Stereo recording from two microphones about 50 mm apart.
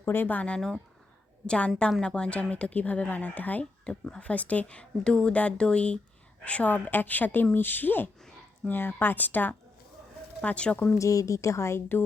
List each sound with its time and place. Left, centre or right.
0.0 s speech: left
0.3 s a woman's voice: left
3.6 s a woman's voice: centre; by 9.6 s left
10.4 s speech: left
10.9 s a woman's voice: left